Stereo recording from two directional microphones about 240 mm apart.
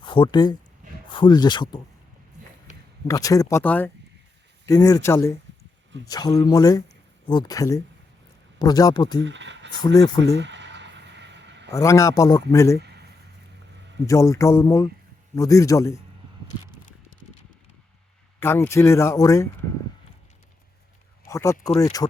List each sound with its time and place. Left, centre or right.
0.0 s speech: centre
3.1 s speech: centre
9.2 s speech: right
9.8 s speech: centre
10.3 s a sound: right
11.7 s speech: centre
14.1 s speech: centre
18.3 s speech: centre
21.2 s speech: centre